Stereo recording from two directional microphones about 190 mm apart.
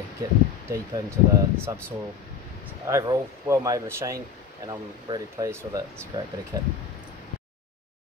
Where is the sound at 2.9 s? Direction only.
15° right (ahead or behind).